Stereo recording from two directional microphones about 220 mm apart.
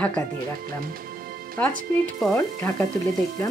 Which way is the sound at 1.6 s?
5° left (ahead or behind).